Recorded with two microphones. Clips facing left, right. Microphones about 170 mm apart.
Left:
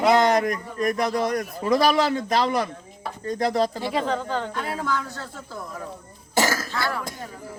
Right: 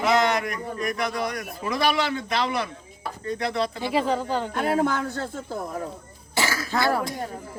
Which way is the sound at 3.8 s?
5° right (ahead or behind).